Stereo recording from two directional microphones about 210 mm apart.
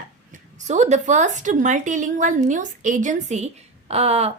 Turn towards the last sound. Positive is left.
turn(degrees=-30)  # may be behind; listen again after turning